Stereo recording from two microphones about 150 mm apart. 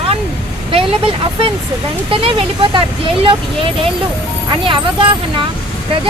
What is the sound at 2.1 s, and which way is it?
Speech, 35° right (ahead or behind).